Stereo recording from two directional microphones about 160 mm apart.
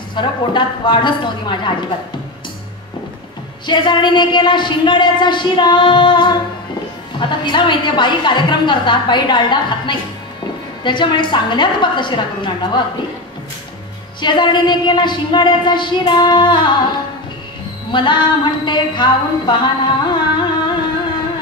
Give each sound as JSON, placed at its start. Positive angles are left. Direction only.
{"t": 0.1, "sound": "a woman's voice", "side_deg": 30}
{"t": 3.6, "sound": "a woman's voice", "side_deg": 30}
{"t": 14.2, "sound": "a woman's voice", "side_deg": 30}
{"t": 17.9, "sound": "a sound", "side_deg": 30}